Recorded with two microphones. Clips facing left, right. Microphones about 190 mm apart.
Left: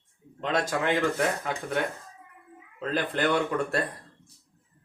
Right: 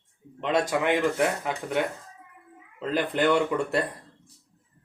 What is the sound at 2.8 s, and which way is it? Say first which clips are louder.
Speech: right 3 dB; 15° right (ahead or behind).